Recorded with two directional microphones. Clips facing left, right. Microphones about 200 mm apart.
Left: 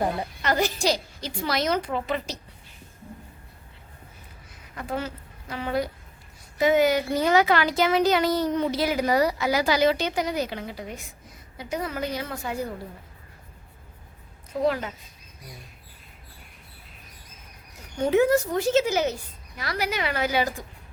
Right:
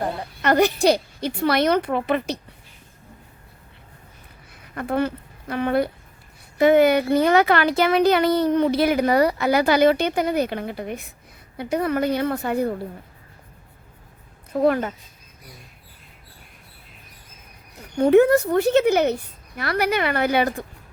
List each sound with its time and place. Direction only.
0.4 s speech: 60° right (ahead or behind)
4.7 s speech: 60° right (ahead or behind)
14.5 s speech: 55° right (ahead or behind)
17.9 s speech: 60° right (ahead or behind)